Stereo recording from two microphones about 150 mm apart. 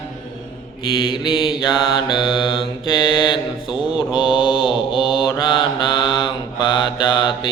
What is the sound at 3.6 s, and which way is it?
Mantra, 5° right (ahead or behind).